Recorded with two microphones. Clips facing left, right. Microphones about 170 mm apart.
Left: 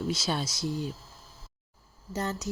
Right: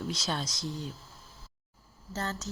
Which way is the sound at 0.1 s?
5° left (ahead or behind).